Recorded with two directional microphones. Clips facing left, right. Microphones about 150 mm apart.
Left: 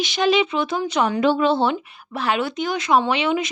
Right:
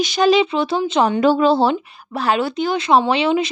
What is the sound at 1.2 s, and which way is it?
Speech, 40° right (ahead or behind).